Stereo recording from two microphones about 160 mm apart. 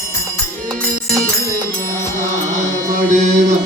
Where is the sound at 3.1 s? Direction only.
50° right (ahead or behind).